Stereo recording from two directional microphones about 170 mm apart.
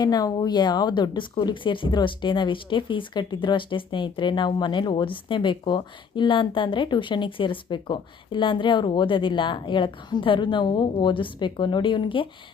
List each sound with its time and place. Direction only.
0.0 s speech: 20° left (ahead or behind)